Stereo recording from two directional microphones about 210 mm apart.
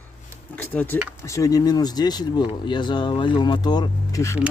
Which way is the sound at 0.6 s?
10° left (ahead or behind).